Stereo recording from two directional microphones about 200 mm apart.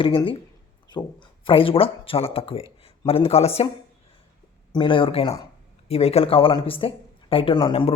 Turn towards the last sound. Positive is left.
turn(degrees=25)  # may be behind; listen again after turning